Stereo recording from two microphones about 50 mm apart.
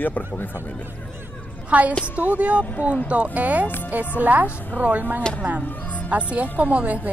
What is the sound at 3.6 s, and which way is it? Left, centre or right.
Speech, left.